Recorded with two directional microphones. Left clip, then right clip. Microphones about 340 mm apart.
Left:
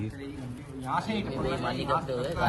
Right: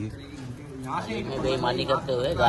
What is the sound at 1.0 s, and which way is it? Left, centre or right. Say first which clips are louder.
A man's voice: right 3 dB; right.